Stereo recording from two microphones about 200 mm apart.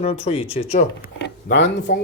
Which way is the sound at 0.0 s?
30° left (ahead or behind).